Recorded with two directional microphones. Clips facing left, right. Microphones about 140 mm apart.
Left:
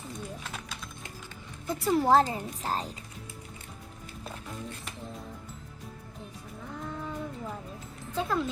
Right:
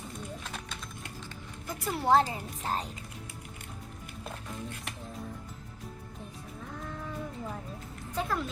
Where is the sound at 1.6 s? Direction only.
35° left (ahead or behind).